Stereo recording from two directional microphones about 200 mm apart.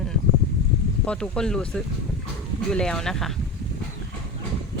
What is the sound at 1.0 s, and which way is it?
Speech, 5° left (ahead or behind).